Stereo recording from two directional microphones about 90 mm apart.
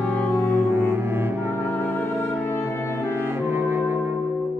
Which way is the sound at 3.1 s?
25° right (ahead or behind).